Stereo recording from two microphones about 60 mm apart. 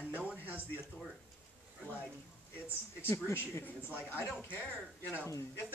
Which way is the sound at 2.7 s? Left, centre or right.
Left.